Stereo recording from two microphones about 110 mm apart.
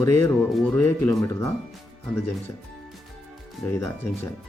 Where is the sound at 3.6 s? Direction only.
Centre (ahead or behind).